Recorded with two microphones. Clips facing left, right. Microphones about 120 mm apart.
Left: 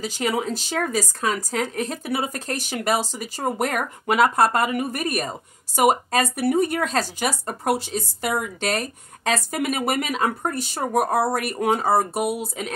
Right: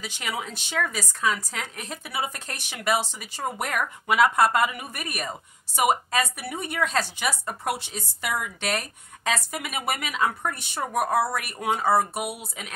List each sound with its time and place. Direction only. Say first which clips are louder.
0.0 s speech: left 8 dB; 35° left (ahead or behind)